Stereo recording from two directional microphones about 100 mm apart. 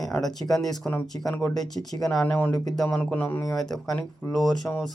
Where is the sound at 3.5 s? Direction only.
5° left (ahead or behind).